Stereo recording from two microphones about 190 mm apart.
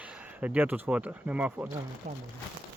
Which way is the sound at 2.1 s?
40° right (ahead or behind).